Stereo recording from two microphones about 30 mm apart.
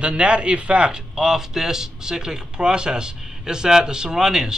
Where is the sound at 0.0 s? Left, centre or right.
Right.